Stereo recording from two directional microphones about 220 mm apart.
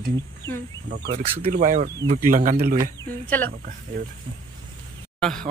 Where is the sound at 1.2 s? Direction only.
25° right (ahead or behind).